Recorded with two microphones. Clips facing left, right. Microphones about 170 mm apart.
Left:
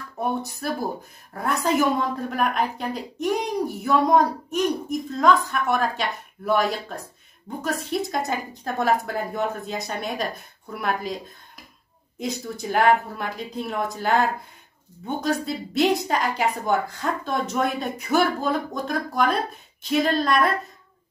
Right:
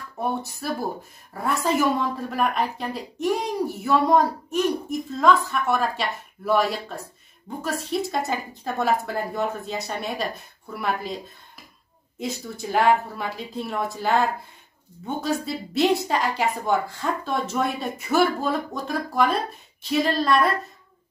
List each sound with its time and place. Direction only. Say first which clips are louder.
0.2 s speech: left 1 dB; centre (ahead or behind)
12.2 s speech: left 1 dB; centre (ahead or behind)